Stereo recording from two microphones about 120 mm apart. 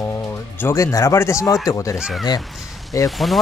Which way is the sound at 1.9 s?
5° right (ahead or behind).